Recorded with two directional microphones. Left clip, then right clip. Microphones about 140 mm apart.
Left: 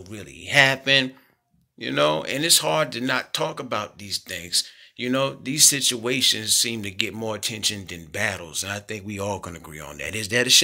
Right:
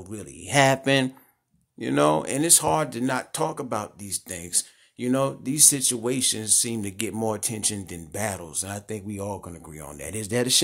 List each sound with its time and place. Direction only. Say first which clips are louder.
0.1 s speech: left 4 dB; 45° right (ahead or behind)
9.1 s speech: left 7 dB; 15° right (ahead or behind)
9.9 s speech: left 4 dB; 25° right (ahead or behind)